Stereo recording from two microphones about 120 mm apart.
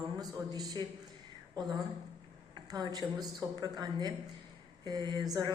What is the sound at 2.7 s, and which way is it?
A woman's voice, 35° right (ahead or behind).